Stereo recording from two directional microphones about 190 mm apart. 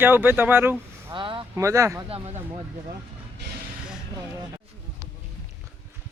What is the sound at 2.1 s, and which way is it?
Speech, 30° right (ahead or behind).